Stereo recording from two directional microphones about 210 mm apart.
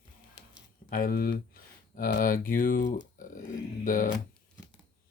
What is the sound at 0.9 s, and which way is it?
Speech, 45° left (ahead or behind).